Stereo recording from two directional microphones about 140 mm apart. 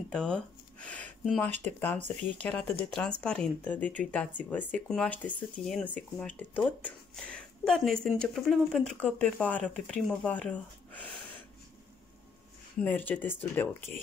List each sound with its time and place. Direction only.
0.1 s speech: 5° left (ahead or behind)
12.8 s speech: 10° left (ahead or behind)